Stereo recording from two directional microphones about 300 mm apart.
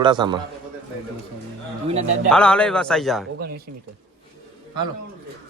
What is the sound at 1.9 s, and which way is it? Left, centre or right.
Speech, right.